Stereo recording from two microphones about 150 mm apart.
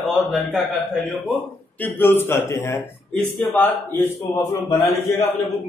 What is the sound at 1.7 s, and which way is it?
A man's voice, 15° left (ahead or behind).